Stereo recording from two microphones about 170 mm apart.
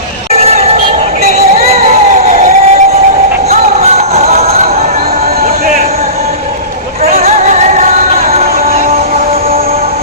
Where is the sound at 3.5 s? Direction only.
40° right (ahead or behind).